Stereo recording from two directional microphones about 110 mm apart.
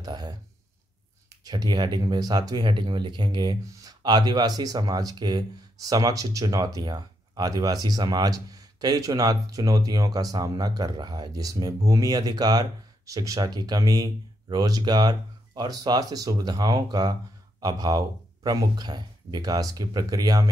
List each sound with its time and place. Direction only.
0.0 s speech: 40° right (ahead or behind)
1.4 s speech: 40° right (ahead or behind)